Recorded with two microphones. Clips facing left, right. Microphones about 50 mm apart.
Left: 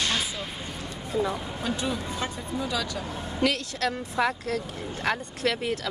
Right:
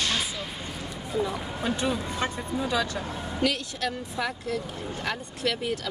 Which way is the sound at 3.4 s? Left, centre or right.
Left.